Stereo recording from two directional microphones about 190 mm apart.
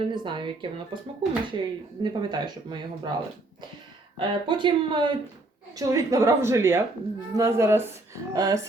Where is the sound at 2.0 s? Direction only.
25° right (ahead or behind).